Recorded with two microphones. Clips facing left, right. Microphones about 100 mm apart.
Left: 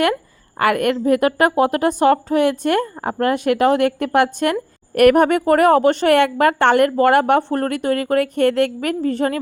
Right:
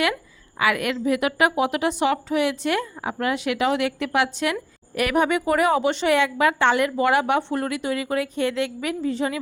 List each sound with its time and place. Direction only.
0.6 s a woman's voice: 50° left (ahead or behind)